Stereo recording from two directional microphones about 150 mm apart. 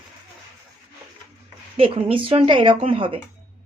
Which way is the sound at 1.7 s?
35° right (ahead or behind).